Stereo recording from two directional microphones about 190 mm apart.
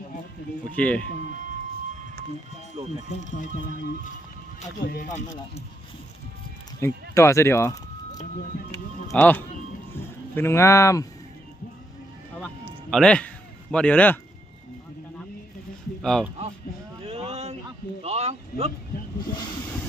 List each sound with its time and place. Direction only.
0.7 s speech: 5° left (ahead or behind)
3.1 s speech: 40° left (ahead or behind)
4.9 s speech: 45° left (ahead or behind)
6.8 s speech: 15° left (ahead or behind)
12.9 s a man's voice: 5° left (ahead or behind)
16.0 s speech: centre (ahead or behind)
17.1 s a sound: 35° right (ahead or behind)
19.3 s train: 25° left (ahead or behind)